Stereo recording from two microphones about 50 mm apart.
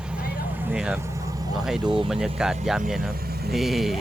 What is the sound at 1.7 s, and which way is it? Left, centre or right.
Speech, centre.